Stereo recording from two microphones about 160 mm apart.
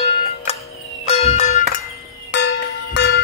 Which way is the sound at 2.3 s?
90° left.